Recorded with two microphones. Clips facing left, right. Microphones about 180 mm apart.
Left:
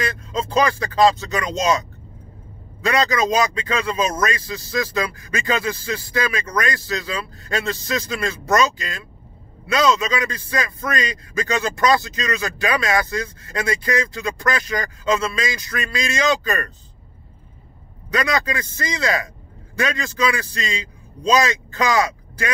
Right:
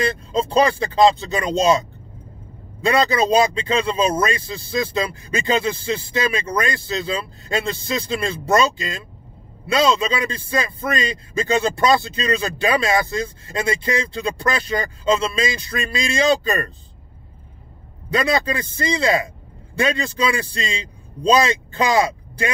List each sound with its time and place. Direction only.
0.0 s a man's voice: 30° right (ahead or behind)
2.8 s a man's voice: 30° right (ahead or behind)
18.1 s a man's voice: 30° right (ahead or behind)